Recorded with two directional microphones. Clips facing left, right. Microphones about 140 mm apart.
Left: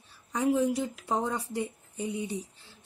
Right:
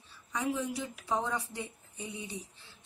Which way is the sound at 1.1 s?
50° left (ahead or behind).